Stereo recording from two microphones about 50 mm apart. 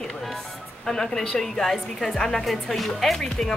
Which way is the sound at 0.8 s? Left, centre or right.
Centre.